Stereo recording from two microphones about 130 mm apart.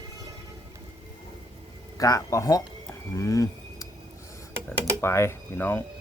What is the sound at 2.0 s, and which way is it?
Speech, 25° left (ahead or behind).